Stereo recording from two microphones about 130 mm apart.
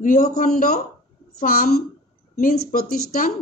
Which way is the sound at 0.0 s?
90° left.